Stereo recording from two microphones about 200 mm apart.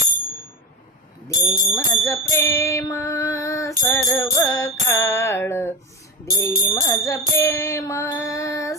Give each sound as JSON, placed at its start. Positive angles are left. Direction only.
{"t": 1.3, "sound": "female singing", "side_deg": 15}